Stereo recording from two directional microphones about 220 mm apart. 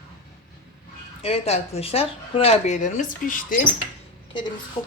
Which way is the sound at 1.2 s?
30° left (ahead or behind).